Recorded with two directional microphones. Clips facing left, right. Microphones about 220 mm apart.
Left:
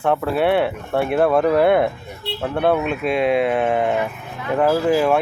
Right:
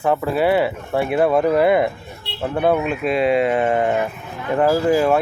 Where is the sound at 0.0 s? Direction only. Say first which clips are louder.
Even; 5° right (ahead or behind).